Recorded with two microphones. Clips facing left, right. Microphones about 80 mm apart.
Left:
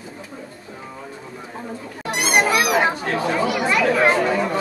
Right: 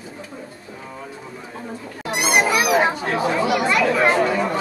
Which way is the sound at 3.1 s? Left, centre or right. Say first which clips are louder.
Right 1 dB; centre.